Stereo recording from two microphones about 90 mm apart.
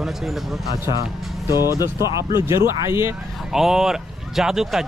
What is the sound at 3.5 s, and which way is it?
Speech, 5° right (ahead or behind).